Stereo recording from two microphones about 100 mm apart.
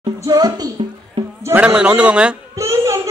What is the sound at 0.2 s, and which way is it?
Speech, 40° right (ahead or behind).